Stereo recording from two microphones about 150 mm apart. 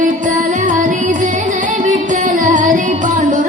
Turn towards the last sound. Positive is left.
turn(degrees=-60)  # may be behind; listen again after turning